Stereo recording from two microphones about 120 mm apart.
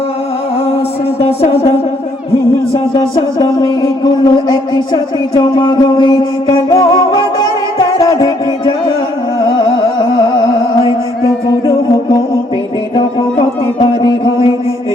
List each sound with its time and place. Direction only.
1.2 s music: 55° left (ahead or behind)
2.7 s speech: 40° left (ahead or behind)
4.0 s music: 40° left (ahead or behind)
13.0 s a sound: 45° left (ahead or behind)